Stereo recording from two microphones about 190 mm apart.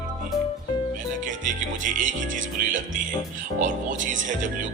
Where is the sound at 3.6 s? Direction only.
40° right (ahead or behind).